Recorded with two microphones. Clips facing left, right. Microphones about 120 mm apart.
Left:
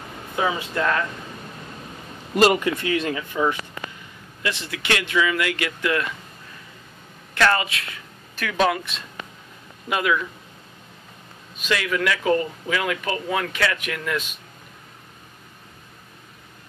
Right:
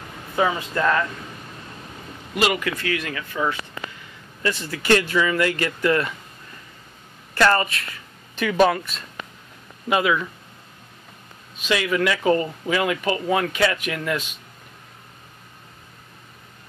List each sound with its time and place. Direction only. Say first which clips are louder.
0.4 s speech: right 2 dB; 5° right (ahead or behind)
2.3 s a man's voice: left 5 dB; 40° left (ahead or behind)
2.6 s speech: left 3 dB; 25° left (ahead or behind)
4.4 s speech: right 3 dB; centre (ahead or behind)
7.5 s speech: right 2 dB; centre (ahead or behind)
8.4 s speech: right 5 dB; 10° right (ahead or behind)
8.6 s speech: right 1 dB; centre (ahead or behind)
11.7 s speech: right 2 dB; 5° right (ahead or behind)